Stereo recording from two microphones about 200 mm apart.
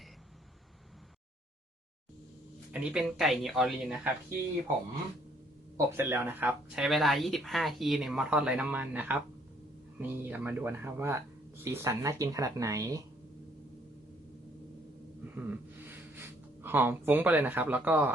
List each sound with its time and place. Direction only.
2.7 s speech: 5° right (ahead or behind)
5.7 s speech: 10° right (ahead or behind)
15.4 s a sound: 10° right (ahead or behind)
16.6 s speech: 10° right (ahead or behind)